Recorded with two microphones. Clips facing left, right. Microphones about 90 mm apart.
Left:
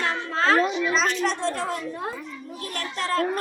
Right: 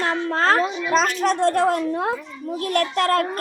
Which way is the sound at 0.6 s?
15° right (ahead or behind).